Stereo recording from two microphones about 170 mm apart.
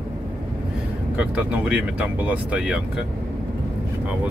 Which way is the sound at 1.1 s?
5° right (ahead or behind).